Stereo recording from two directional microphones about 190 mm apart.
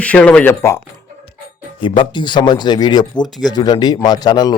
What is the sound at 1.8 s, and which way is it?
Speech, 25° left (ahead or behind).